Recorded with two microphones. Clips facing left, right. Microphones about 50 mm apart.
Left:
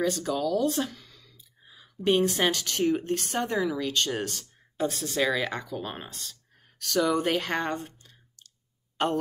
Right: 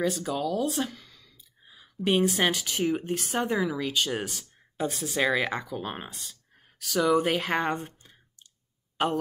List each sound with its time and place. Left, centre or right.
0.0 s speech: centre
7.8 s clicking: right
8.9 s speech: centre